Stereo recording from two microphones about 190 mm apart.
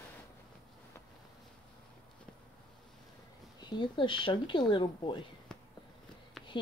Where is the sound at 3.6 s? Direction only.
25° left (ahead or behind).